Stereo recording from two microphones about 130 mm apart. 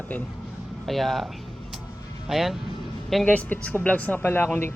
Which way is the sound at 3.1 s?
10° left (ahead or behind).